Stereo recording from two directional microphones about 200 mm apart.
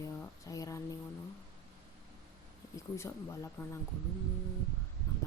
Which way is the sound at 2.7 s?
15° left (ahead or behind).